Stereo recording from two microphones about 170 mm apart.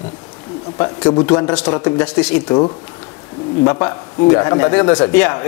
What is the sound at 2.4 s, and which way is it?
Speech, 30° left (ahead or behind).